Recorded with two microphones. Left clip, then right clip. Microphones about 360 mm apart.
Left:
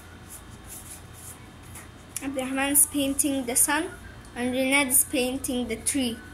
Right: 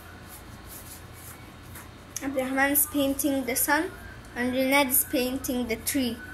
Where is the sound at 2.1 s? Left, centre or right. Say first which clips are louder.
Right 3 dB; centre.